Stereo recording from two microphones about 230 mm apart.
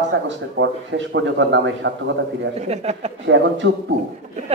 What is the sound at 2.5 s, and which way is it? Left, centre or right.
Speech, right.